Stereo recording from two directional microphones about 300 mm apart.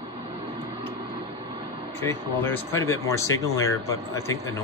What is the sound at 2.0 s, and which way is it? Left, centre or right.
Speech, centre.